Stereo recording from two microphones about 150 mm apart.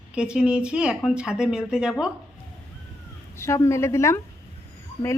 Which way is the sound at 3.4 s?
20° left (ahead or behind).